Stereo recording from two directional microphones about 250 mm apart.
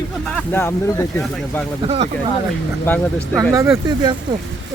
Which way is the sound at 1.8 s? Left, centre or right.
Right.